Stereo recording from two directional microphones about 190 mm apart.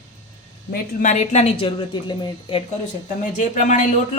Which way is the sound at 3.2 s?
45° left (ahead or behind).